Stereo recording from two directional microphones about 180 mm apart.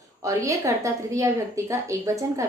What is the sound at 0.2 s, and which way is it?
A woman's voice, 20° right (ahead or behind).